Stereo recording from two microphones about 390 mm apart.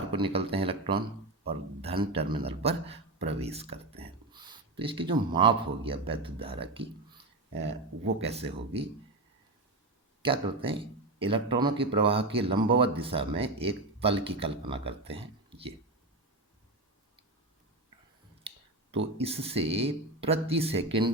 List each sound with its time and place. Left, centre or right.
0.1 s speech: centre
7.5 s speech: right
8.2 s speech: centre
10.2 s speech: centre
18.5 s a sound: centre
19.1 s speech: centre